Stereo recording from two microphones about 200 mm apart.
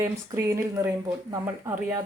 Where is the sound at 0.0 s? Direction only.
10° right (ahead or behind).